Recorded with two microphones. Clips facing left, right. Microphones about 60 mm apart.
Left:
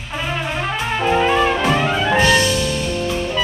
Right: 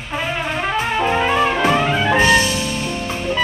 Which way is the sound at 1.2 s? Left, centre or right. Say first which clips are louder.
Even; centre.